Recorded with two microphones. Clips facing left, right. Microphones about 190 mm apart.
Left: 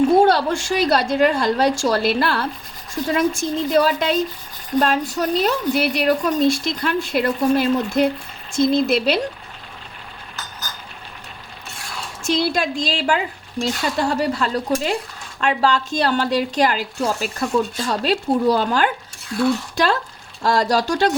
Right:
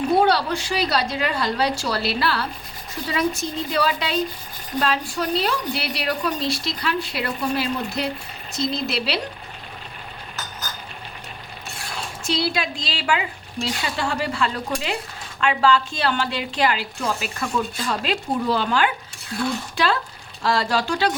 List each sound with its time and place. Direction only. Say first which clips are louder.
0.2 s a woman's voice: left 4 dB; 50° left (ahead or behind)
12.2 s a woman's voice: left 4 dB; 45° left (ahead or behind)